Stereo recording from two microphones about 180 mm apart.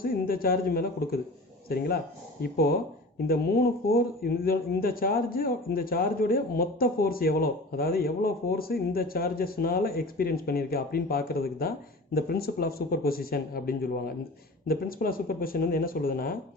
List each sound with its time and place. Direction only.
0.0 s speech: 55° left (ahead or behind)
2.4 s speech: 55° left (ahead or behind)